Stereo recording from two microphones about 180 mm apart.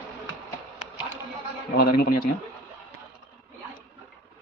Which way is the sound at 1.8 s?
55° left (ahead or behind).